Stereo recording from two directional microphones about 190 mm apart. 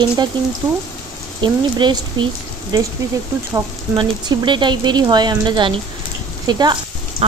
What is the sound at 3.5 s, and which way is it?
Speech, 25° right (ahead or behind).